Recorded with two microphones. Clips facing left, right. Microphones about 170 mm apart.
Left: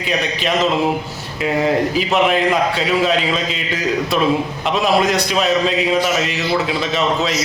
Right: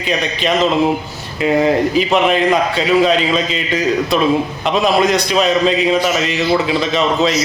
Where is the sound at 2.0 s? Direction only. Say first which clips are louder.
Right 2 dB; 5° left (ahead or behind).